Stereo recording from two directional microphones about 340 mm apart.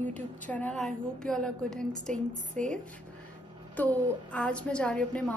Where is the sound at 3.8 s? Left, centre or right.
Centre.